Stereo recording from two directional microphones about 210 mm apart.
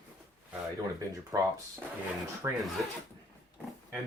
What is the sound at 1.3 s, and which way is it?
Speech, 15° right (ahead or behind).